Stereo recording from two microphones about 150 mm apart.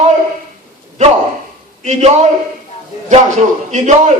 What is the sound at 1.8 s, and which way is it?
Speech, 50° right (ahead or behind).